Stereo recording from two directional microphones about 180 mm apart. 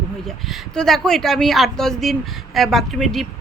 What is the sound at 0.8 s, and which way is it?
A woman's voice, centre (ahead or behind).